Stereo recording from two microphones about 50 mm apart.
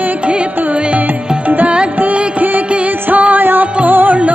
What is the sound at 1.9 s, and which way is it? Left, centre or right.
Music, right.